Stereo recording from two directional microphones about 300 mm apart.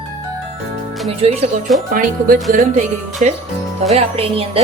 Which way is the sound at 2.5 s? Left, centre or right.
Right.